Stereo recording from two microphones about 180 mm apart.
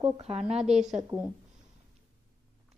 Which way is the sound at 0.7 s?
40° right (ahead or behind).